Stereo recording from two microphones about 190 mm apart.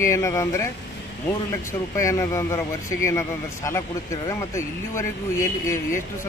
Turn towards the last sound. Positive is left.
turn(degrees=15)  # may be behind; listen again after turning